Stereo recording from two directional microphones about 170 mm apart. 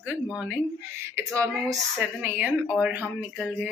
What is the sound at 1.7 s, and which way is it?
Speech, 5° right (ahead or behind).